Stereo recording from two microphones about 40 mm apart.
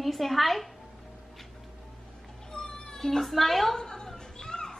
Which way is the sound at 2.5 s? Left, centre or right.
Centre.